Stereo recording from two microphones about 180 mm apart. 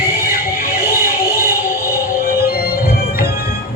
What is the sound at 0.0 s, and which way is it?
Music, 55° left (ahead or behind).